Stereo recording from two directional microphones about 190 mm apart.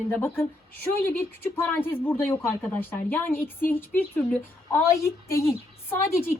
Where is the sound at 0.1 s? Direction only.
10° left (ahead or behind).